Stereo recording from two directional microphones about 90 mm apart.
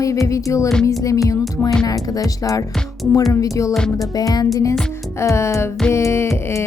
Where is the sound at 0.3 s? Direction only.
35° left (ahead or behind).